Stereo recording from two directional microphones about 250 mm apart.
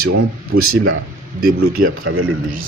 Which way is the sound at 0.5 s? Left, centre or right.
Right.